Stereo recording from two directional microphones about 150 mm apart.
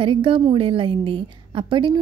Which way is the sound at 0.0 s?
35° right (ahead or behind).